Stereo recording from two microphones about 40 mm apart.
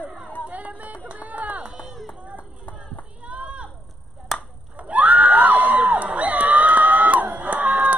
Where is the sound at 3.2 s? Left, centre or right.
Right.